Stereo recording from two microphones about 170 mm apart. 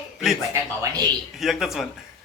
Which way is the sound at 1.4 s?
Centre (ahead or behind).